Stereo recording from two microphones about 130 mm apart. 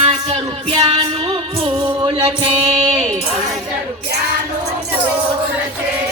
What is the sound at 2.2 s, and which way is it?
Singing, 40° right (ahead or behind).